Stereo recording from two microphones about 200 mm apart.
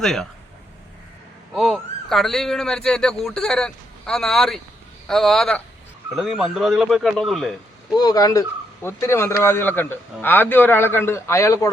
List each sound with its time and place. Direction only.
0.0 s speech: centre (ahead or behind)
1.5 s speech: centre (ahead or behind)
7.9 s a man's voice: 20° left (ahead or behind)